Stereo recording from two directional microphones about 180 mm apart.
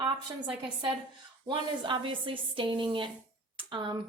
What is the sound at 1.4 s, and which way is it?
Speech, 25° right (ahead or behind).